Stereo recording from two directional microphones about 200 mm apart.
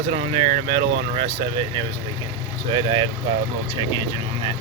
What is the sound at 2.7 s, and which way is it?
Speech, 25° right (ahead or behind).